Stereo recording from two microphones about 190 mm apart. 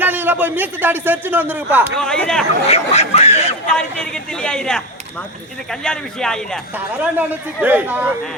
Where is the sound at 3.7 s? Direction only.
5° left (ahead or behind).